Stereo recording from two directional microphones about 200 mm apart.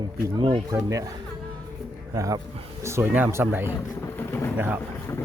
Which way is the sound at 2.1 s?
15° right (ahead or behind).